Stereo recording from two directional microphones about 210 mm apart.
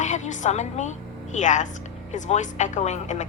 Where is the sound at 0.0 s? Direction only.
35° left (ahead or behind).